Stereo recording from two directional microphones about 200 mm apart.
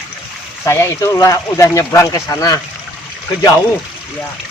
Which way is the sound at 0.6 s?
15° left (ahead or behind).